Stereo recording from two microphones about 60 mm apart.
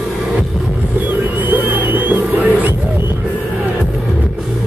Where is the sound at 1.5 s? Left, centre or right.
Right.